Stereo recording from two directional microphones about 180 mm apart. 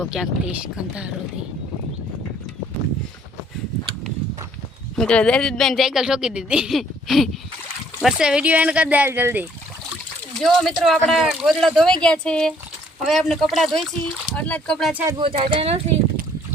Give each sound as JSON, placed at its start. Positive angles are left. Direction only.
{"t": 0.0, "sound": "speech", "side_deg": -5}
{"t": 4.9, "sound": "speech", "side_deg": 5}
{"t": 10.3, "sound": "speech", "side_deg": 0}
{"t": 15.2, "sound": "speech", "side_deg": -30}